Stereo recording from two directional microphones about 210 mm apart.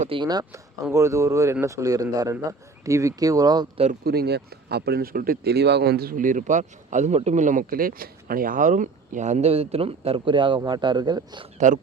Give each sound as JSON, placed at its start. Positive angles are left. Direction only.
{"t": 0.0, "sound": "a man's voice", "side_deg": -25}
{"t": 4.0, "sound": "speech", "side_deg": -50}
{"t": 11.5, "sound": "speech", "side_deg": -35}